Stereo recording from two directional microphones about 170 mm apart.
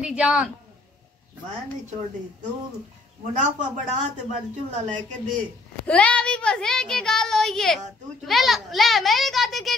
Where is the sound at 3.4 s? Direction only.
45° right (ahead or behind).